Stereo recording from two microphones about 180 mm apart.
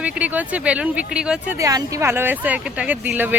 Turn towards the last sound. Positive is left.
turn(degrees=-10)  # may be behind; listen again after turning